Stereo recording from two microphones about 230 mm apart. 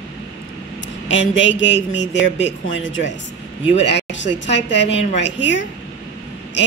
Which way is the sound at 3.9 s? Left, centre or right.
Left.